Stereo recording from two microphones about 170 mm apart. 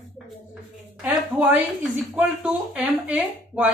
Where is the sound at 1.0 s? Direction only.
5° right (ahead or behind).